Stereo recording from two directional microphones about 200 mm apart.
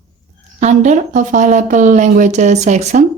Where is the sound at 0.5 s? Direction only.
35° right (ahead or behind).